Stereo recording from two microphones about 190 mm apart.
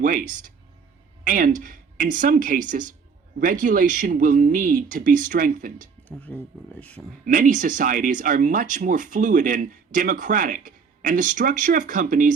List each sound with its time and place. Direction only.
0.0 s speech: 45° right (ahead or behind)
6.1 s speech: 10° left (ahead or behind)
7.3 s speech: 45° right (ahead or behind)